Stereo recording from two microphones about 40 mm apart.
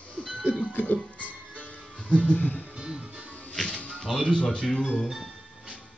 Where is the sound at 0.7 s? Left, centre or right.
Left.